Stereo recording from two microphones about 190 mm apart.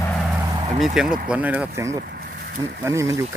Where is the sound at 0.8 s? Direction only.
5° right (ahead or behind).